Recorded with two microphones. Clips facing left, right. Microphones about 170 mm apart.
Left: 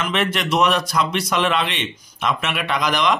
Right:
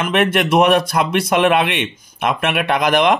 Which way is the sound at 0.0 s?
55° right (ahead or behind).